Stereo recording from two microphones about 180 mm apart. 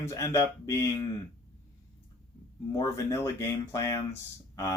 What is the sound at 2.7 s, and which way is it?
Speech, 20° left (ahead or behind).